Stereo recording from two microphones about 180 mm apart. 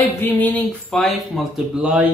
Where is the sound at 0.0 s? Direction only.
10° left (ahead or behind); by 2.0 s 5° right (ahead or behind).